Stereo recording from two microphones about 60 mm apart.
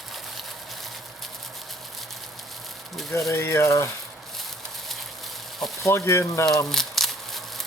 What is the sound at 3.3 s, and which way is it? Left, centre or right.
Speech, left.